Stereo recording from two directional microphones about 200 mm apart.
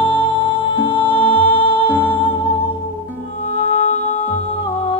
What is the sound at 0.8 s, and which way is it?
Music, 25° left (ahead or behind).